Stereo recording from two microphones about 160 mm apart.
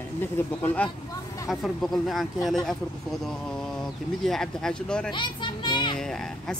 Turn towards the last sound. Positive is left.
turn(degrees=5)  # may be behind; listen again after turning